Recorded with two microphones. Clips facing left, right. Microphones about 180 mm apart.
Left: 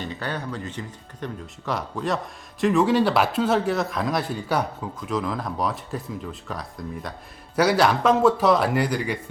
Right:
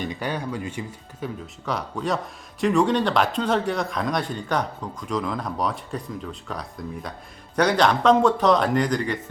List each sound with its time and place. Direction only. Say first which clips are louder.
0.0 s speech: right 2 dB; 15° right (ahead or behind)
1.6 s a man's voice: even; centre (ahead or behind)